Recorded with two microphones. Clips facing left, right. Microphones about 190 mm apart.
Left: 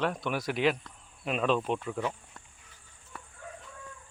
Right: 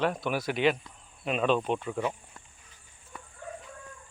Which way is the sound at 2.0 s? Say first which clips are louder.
Right 2 dB; 10° right (ahead or behind).